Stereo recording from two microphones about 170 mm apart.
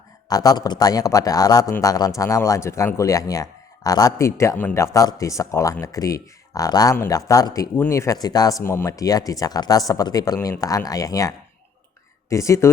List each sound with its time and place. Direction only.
0.3 s speech: 20° left (ahead or behind)